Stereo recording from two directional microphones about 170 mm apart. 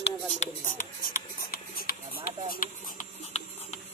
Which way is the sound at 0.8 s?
60° left (ahead or behind).